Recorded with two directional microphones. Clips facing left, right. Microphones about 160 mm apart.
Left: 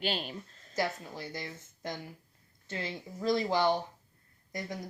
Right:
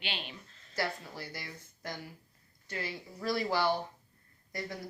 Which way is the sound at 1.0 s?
20° left (ahead or behind).